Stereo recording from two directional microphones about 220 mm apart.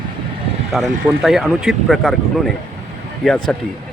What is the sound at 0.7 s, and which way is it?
Speech, centre (ahead or behind).